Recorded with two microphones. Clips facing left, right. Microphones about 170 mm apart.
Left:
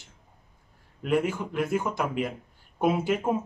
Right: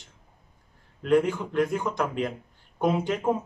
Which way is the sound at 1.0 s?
5° left (ahead or behind).